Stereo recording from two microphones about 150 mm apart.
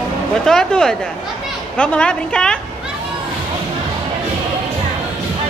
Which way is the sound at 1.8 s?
5° left (ahead or behind).